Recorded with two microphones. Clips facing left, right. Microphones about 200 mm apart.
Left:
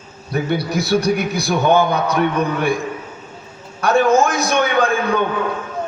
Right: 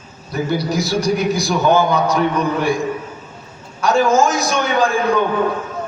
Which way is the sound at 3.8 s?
60° left (ahead or behind).